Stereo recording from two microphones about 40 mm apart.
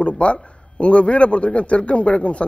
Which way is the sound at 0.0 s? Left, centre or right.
Left.